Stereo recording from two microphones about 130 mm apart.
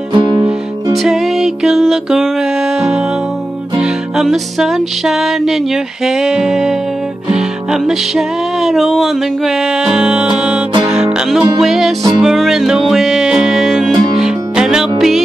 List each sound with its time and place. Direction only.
0.1 s music: 35° right (ahead or behind)
0.9 s music: centre (ahead or behind)